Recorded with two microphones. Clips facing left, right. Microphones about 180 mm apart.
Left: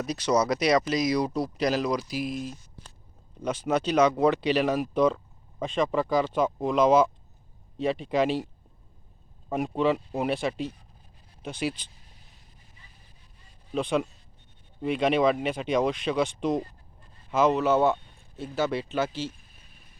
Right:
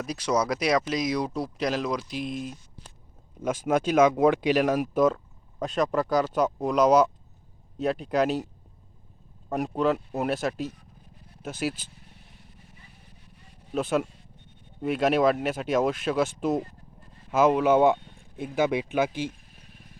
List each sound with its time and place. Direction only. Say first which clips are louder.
0.0 s speech: left 2 dB; 5° right (ahead or behind)
0.3 s speech: left 1 dB; 5° left (ahead or behind)
3.7 s speech: right 2 dB; 10° right (ahead or behind)
9.5 s speech: even; centre (ahead or behind)
13.7 s speech: right 1 dB; 5° right (ahead or behind)
19.3 s vehicle: right 4 dB; 70° right (ahead or behind)